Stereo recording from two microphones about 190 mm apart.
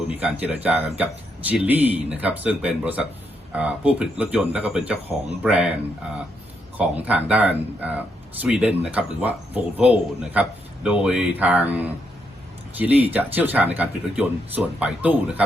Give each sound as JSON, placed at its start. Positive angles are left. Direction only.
{"t": 0.2, "sound": "speech", "side_deg": -5}
{"t": 6.7, "sound": "speech", "side_deg": -10}